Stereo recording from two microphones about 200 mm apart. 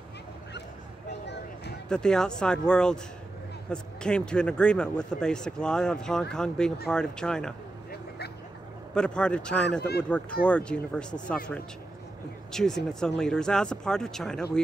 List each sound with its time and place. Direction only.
1.9 s speech: 5° left (ahead or behind)
8.9 s speech: 5° left (ahead or behind)
9.7 s speech: 55° left (ahead or behind)
10.4 s speech: 5° left (ahead or behind)